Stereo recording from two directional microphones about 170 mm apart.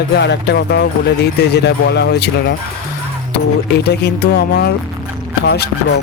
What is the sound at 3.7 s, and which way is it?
Speech, 80° left.